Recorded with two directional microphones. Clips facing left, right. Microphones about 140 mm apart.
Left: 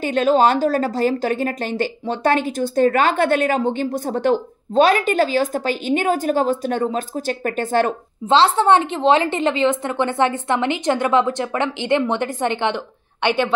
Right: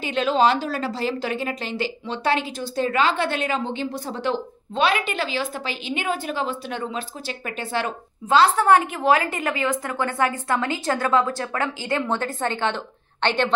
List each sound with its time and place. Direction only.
0.0 s a woman's voice: 45° left (ahead or behind)
8.3 s a woman's voice: 25° left (ahead or behind); by 13.5 s 10° left (ahead or behind)